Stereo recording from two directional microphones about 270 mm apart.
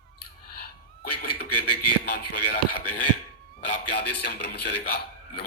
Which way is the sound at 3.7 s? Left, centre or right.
Left.